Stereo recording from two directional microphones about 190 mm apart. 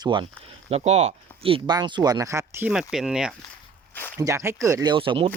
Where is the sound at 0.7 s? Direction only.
35° right (ahead or behind); by 3.3 s 5° right (ahead or behind).